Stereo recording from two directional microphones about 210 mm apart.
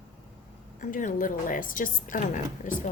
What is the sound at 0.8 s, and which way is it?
A woman's voice, 40° left (ahead or behind).